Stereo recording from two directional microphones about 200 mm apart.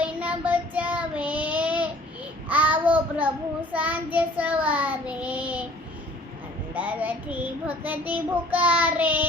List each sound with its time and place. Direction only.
0.0 s child singing: 5° right (ahead or behind)
6.7 s child singing: 10° right (ahead or behind)